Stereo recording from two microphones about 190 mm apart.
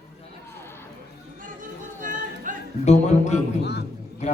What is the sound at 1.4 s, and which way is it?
Music, 45° right (ahead or behind).